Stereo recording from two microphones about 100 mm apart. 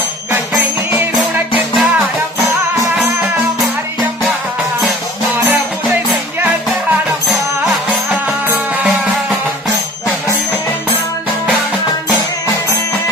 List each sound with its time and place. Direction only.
1.7 s music: centre (ahead or behind)
7.9 s music: 15° right (ahead or behind)